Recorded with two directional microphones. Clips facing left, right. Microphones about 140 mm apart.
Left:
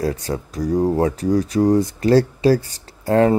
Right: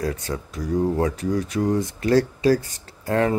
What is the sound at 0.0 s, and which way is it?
Speech, 35° left (ahead or behind).